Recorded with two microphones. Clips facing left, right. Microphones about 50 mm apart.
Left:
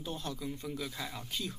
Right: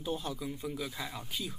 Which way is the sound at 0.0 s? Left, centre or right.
Centre.